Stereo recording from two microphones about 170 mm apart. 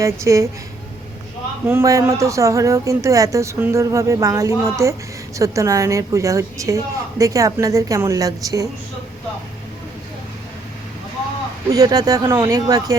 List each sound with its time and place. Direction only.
0.0 s speech: 15° right (ahead or behind)
1.6 s a woman's voice: 15° right (ahead or behind)
11.7 s a woman's voice: 20° right (ahead or behind)